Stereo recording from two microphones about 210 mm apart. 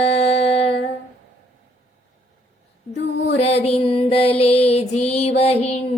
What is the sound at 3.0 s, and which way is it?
Mantra, 60° left (ahead or behind).